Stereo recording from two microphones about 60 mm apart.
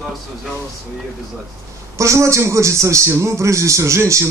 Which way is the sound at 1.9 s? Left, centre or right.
Right.